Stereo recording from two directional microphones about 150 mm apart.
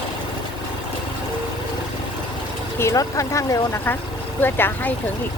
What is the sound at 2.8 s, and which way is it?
Speech, 20° left (ahead or behind).